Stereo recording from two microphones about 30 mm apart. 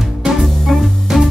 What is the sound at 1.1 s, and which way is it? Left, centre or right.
Music, centre.